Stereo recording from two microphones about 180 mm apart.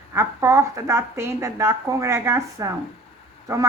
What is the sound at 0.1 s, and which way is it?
A woman's voice, 15° right (ahead or behind).